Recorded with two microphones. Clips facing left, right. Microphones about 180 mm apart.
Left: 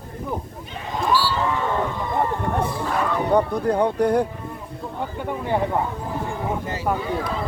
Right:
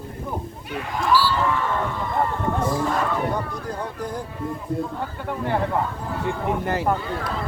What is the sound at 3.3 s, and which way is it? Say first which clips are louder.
Speech: left 8 dB; 60° left (ahead or behind).